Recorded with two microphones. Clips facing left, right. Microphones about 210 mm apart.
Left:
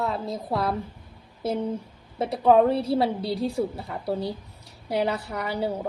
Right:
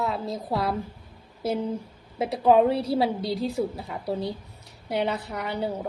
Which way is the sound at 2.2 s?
Centre (ahead or behind).